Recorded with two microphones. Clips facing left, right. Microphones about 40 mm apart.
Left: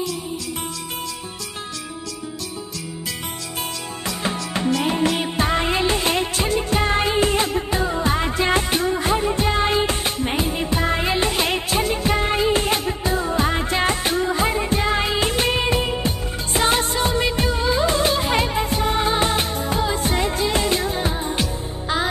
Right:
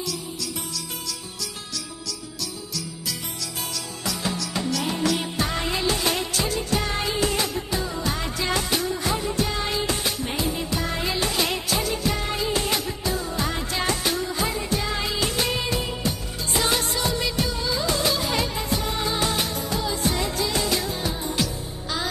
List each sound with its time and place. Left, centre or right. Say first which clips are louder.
4.0 s music: left 2 dB; left